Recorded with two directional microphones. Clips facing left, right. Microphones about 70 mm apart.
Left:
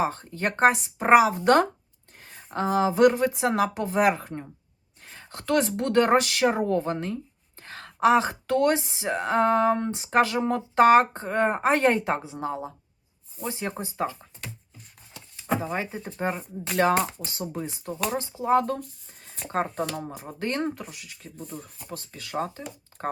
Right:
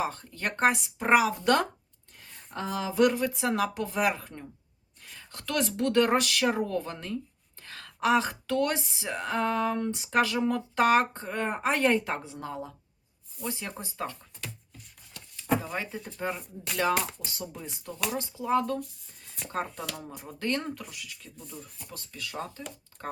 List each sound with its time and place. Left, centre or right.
0.0 s speech: left
1.0 s speech: left
5.0 s a sound: left
5.5 s speech: left
7.6 s a sound: left
8.0 s speech: left
13.5 s speech: left
15.6 s speech: left
16.0 s speech: left
20.4 s speech: left
21.4 s speech: left